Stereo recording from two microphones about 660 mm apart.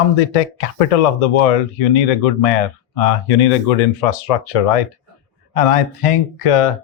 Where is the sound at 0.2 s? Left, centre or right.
Left.